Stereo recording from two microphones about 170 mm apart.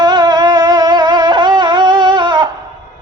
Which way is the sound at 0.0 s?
25° right (ahead or behind).